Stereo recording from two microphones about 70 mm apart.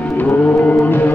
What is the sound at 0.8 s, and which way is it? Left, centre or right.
Music, left.